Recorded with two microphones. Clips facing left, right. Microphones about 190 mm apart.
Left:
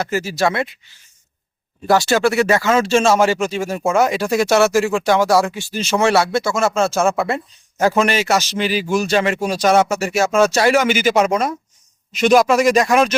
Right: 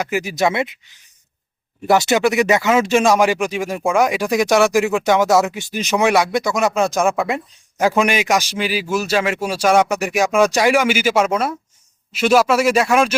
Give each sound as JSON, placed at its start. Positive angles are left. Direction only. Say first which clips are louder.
{"t": 0.0, "sound": "speech", "louder": "even", "side_deg": -15}
{"t": 1.9, "sound": "speech", "louder": "even", "side_deg": -20}